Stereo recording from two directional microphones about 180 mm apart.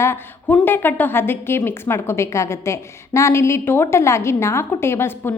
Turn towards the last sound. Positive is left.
turn(degrees=15)  # may be behind; listen again after turning